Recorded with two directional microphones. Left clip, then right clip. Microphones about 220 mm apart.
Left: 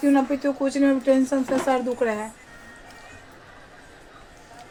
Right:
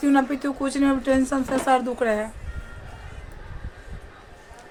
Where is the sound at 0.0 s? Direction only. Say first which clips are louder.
Even; 20° right (ahead or behind).